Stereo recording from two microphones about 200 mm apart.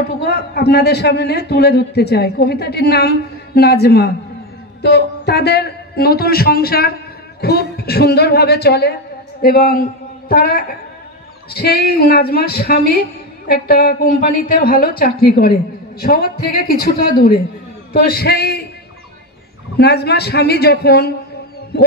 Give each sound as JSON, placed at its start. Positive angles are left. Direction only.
{"t": 0.2, "sound": "a man's voice", "side_deg": 55}
{"t": 19.8, "sound": "a man's voice", "side_deg": 55}